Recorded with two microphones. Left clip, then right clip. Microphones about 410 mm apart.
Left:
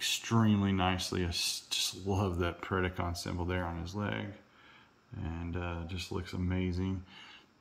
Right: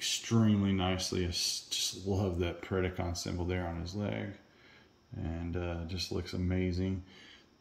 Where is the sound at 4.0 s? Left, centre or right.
Left.